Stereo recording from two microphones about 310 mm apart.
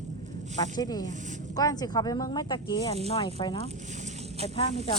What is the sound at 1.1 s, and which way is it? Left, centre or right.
Speech, right.